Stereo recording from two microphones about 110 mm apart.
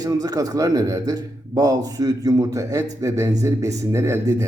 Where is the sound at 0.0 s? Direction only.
35° right (ahead or behind).